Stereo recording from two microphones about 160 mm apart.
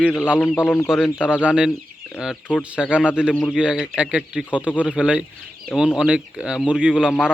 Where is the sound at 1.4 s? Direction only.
5° right (ahead or behind).